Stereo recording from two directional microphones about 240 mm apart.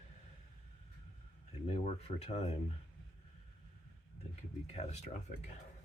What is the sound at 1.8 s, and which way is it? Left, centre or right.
Speech, left.